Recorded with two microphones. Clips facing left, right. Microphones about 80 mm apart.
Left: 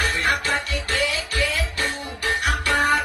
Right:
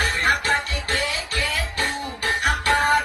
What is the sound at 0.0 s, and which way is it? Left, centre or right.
Music, right.